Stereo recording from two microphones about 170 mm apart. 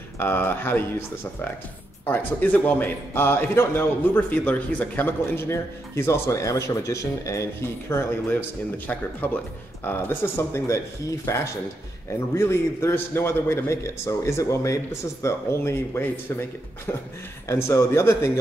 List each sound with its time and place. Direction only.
0.2 s a man's voice: 10° left (ahead or behind)
2.0 s a man's voice: 10° left (ahead or behind)